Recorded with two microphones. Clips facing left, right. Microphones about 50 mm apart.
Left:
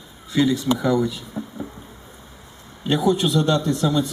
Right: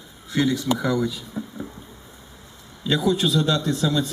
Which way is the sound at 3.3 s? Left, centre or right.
Centre.